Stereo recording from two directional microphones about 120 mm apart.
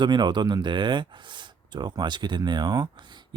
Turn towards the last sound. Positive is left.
turn(degrees=-40)  # may be behind; listen again after turning